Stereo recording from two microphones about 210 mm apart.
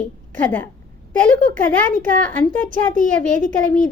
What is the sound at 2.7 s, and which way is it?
Speech, 40° right (ahead or behind).